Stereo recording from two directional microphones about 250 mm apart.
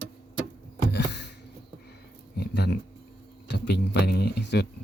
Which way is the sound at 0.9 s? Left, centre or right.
Left.